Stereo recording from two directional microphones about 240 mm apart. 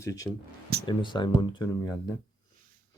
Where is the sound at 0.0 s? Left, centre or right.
Centre.